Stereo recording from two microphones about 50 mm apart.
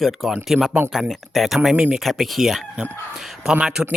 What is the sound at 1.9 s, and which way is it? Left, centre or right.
Speech, centre.